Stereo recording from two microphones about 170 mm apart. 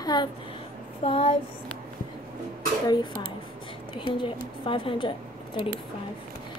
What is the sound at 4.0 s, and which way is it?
A woman's voice, 30° left (ahead or behind).